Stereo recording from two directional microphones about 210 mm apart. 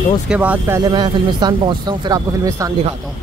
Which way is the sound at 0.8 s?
20° right (ahead or behind).